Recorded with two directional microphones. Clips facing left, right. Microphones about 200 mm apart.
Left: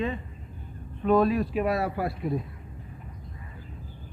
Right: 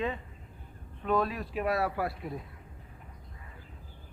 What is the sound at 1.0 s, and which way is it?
Speech, 20° left (ahead or behind).